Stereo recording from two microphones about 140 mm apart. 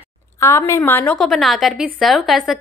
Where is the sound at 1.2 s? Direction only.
Centre (ahead or behind).